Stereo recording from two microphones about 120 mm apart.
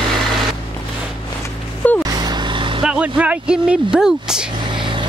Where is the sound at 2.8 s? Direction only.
10° right (ahead or behind).